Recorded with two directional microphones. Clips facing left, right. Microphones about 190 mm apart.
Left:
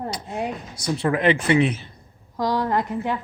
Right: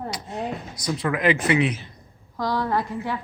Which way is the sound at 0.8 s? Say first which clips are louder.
Left 2 dB; 30° left (ahead or behind).